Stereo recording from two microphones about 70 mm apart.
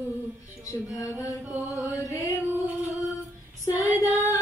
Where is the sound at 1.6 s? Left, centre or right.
Left.